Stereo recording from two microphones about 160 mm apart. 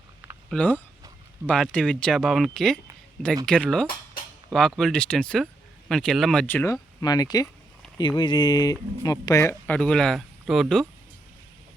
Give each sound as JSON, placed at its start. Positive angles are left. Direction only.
{"t": 0.5, "sound": "speech", "side_deg": 10}
{"t": 7.0, "sound": "speech", "side_deg": 25}